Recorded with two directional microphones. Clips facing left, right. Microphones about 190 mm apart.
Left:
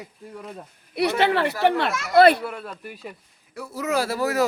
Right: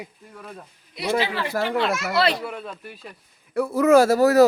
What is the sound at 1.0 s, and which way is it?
Speech, 65° left (ahead or behind).